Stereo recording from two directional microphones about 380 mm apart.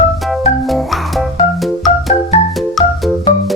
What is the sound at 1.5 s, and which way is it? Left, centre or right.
Organ, centre.